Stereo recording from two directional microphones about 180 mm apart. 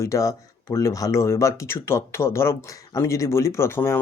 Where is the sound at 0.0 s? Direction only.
15° left (ahead or behind).